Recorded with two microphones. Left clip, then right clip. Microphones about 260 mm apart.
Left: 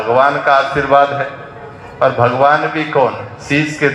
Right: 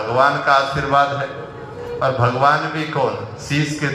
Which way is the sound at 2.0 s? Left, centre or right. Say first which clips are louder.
Left 5 dB; left.